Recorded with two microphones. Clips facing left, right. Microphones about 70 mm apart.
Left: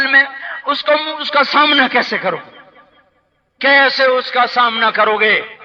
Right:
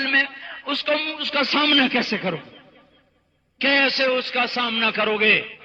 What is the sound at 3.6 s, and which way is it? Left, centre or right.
A man's voice, left.